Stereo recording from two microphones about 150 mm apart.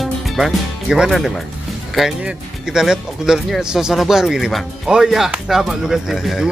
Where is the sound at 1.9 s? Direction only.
5° right (ahead or behind).